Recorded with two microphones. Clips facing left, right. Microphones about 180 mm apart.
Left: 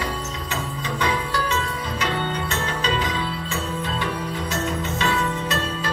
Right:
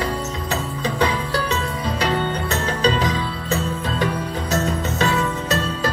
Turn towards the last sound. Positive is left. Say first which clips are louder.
# right 4 dB
turn(degrees=-40)  # may be behind; listen again after turning